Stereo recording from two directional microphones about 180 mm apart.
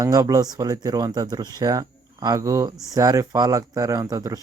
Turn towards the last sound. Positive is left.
turn(degrees=-20)  # may be behind; listen again after turning